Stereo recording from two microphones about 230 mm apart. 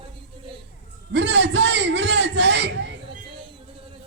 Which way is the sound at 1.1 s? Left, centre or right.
Right.